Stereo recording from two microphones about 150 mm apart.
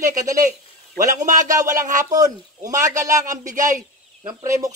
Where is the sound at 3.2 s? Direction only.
55° right (ahead or behind).